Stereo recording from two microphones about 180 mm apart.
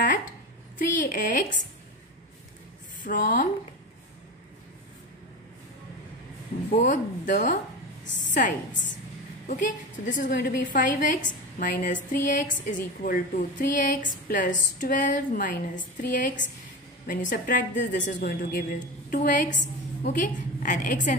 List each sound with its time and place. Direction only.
0.7 s a woman's voice: 50° left (ahead or behind)
3.0 s a woman's voice: 50° left (ahead or behind)
6.7 s a woman's voice: 45° left (ahead or behind)